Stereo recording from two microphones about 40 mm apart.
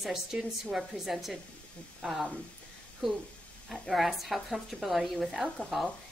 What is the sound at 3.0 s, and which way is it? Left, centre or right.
A woman's voice, centre.